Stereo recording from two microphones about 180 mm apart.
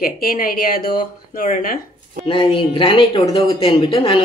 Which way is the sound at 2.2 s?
25° left (ahead or behind).